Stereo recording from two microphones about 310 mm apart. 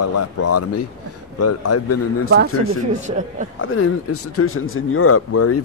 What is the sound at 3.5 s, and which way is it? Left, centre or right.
Speech, left.